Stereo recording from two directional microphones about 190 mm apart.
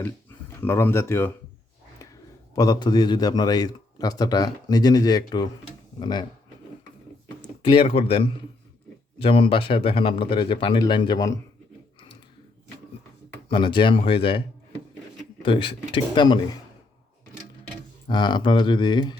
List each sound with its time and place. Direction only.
0.0 s speech: 10° left (ahead or behind)
2.6 s a man's voice: 20° left (ahead or behind)
7.6 s a man's voice: 25° left (ahead or behind)
13.5 s a man's voice: 25° left (ahead or behind)
15.4 s a man's voice: 25° left (ahead or behind)
18.1 s a man's voice: 25° left (ahead or behind)